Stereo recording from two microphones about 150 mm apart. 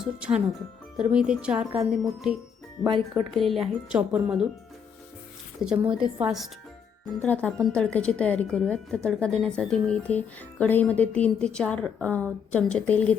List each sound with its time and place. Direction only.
0.0 s speech: 5° right (ahead or behind)
2.8 s speech: 30° right (ahead or behind)
3.3 s speech: centre (ahead or behind)
5.6 s a woman's voice: 10° right (ahead or behind)
7.2 s speech: 5° left (ahead or behind)